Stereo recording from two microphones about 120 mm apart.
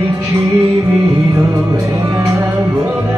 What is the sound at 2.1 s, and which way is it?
Music, 25° right (ahead or behind).